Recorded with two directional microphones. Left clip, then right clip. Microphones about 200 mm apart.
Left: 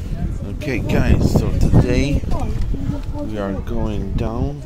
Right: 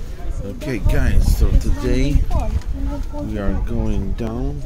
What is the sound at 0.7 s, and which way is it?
Speech, 10° right (ahead or behind).